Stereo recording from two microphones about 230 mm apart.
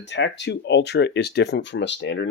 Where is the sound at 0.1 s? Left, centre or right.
Left.